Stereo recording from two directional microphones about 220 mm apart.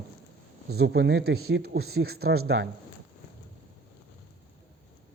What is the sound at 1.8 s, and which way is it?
Speech, 75° right (ahead or behind).